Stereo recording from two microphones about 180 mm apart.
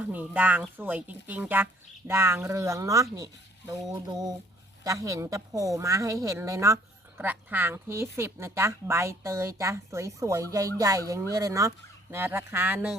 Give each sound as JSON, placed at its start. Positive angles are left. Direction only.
{"t": 0.0, "sound": "a woman's voice", "side_deg": -10}